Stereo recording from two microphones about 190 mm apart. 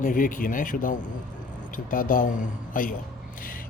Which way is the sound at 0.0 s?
45° left (ahead or behind).